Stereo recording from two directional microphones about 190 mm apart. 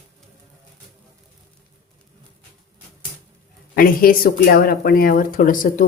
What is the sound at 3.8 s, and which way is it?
Speech, 50° left (ahead or behind).